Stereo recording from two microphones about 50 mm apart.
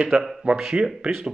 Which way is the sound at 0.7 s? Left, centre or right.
Right.